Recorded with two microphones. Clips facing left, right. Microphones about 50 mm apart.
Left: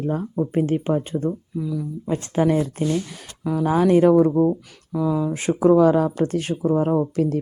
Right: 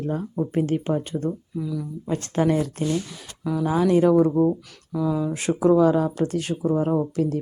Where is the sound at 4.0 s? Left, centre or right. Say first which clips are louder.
Left 1 dB; left.